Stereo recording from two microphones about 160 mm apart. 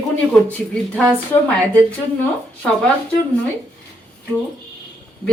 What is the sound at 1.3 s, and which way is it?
Speech, 25° left (ahead or behind).